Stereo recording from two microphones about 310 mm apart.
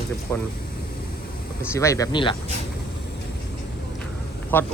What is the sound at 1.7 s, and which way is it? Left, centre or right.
Speech, centre.